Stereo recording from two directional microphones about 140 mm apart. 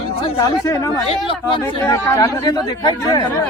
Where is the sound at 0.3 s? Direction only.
20° left (ahead or behind).